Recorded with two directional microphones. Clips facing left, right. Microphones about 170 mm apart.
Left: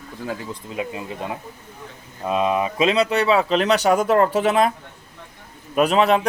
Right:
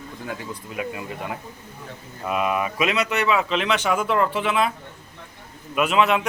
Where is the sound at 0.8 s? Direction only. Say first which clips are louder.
Left 2 dB; 25° left (ahead or behind); by 4.7 s 40° left (ahead or behind).